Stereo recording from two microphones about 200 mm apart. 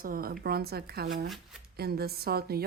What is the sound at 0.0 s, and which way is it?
A woman's voice, 45° right (ahead or behind).